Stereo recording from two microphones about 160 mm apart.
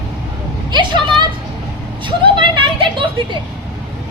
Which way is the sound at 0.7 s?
30° right (ahead or behind).